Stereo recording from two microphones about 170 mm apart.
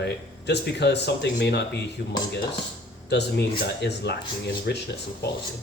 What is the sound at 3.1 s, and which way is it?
Speech, 80° left.